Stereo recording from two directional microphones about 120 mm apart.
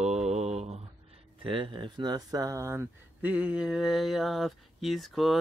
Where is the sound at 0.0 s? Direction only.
65° right (ahead or behind).